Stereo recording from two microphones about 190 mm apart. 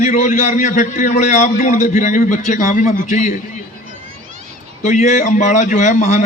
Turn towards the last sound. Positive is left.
turn(degrees=40)  # may be behind; listen again after turning